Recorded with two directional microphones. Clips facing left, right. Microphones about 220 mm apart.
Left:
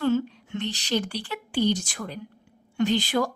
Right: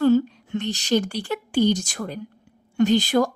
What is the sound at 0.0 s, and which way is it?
A woman's voice, 40° right (ahead or behind).